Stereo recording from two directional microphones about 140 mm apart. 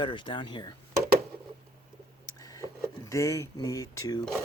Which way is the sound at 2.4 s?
25° left (ahead or behind).